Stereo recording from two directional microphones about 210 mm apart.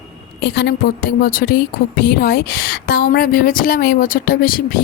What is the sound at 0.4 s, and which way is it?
A woman's voice, 50° left (ahead or behind).